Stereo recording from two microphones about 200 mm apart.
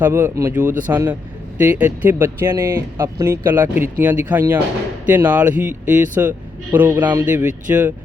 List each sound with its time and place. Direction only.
0.0 s speech: 10° right (ahead or behind)